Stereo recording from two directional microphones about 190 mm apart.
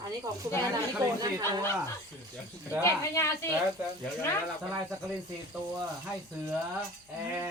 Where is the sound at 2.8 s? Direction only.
15° left (ahead or behind).